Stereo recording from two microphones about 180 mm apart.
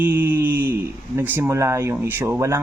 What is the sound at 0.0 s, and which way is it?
Speech, 10° right (ahead or behind).